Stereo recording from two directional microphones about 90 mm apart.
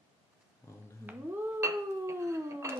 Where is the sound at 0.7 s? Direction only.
35° left (ahead or behind).